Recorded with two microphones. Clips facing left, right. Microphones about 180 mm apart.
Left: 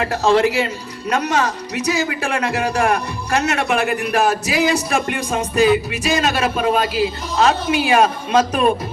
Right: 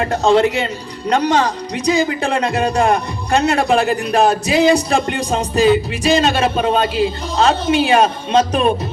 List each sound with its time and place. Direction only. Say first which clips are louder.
0.0 s speech: right 2 dB; 30° right (ahead or behind)